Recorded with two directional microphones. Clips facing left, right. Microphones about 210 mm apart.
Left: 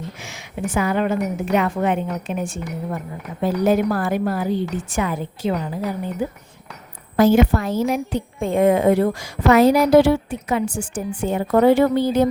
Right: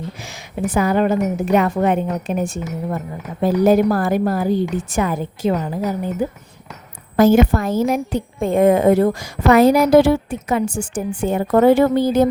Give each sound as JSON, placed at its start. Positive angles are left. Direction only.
{"t": 0.2, "sound": "a woman's voice", "side_deg": -35}
{"t": 7.2, "sound": "a woman's voice", "side_deg": -45}